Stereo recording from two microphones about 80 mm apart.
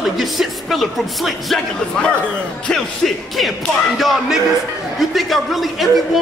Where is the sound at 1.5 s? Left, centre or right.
Centre.